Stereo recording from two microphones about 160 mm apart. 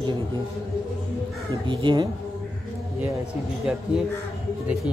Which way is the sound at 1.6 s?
30° right (ahead or behind).